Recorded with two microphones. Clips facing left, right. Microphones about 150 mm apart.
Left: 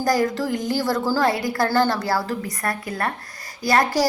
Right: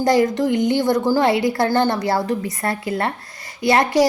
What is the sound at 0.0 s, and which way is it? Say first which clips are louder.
A woman's voice: right 4 dB; 25° right (ahead or behind).